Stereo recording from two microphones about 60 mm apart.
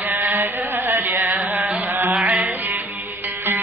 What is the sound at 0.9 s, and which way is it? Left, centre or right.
Music, right.